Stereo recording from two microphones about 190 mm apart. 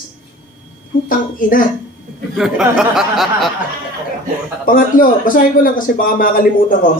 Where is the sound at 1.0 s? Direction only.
45° left (ahead or behind).